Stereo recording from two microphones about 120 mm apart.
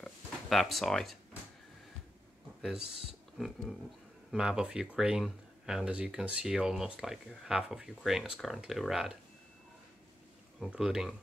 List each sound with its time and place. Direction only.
0.0 s a sound: centre (ahead or behind)
2.6 s speech: 5° right (ahead or behind)
10.7 s speech: 5° right (ahead or behind)